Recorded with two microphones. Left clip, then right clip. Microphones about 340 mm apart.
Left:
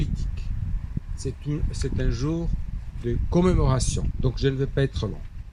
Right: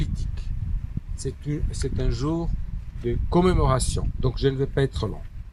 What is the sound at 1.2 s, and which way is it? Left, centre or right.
A man's voice, right.